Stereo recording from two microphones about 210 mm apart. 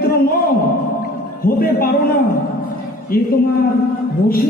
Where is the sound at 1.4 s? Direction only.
45° left (ahead or behind).